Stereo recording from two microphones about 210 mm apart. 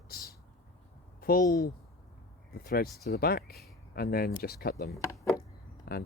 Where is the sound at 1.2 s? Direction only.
45° left (ahead or behind).